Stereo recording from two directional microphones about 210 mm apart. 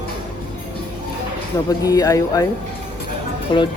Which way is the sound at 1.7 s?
15° left (ahead or behind).